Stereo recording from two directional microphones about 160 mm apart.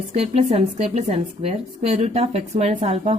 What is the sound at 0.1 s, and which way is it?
A woman's voice, 40° right (ahead or behind).